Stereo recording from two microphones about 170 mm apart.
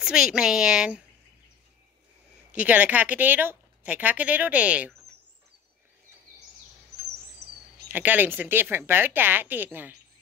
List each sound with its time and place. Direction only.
0.0 s a woman's voice: 5° right (ahead or behind)
2.5 s a woman's voice: 10° right (ahead or behind)
7.4 s a sound: 70° right (ahead or behind)
7.9 s a woman's voice: 10° right (ahead or behind)